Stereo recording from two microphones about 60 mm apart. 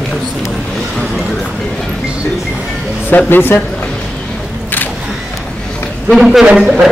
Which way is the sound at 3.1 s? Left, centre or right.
Left.